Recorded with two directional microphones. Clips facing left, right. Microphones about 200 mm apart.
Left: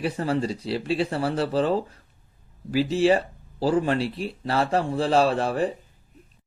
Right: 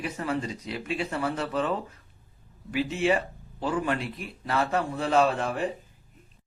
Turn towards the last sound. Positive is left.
turn(degrees=35)  # may be behind; listen again after turning